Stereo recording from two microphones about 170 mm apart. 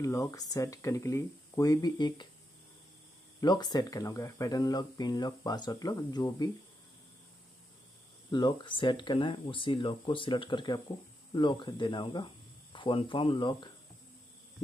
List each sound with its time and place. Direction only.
0.0 s speech: 20° left (ahead or behind)
3.3 s speech: 25° left (ahead or behind)
8.3 s speech: 30° left (ahead or behind)